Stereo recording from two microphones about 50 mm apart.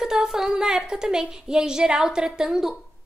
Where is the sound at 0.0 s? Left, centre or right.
Centre.